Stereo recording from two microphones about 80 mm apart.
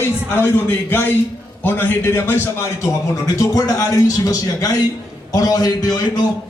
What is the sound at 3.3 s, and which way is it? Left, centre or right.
A man's voice, left.